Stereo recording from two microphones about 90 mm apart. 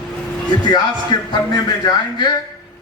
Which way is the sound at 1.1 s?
55° left (ahead or behind).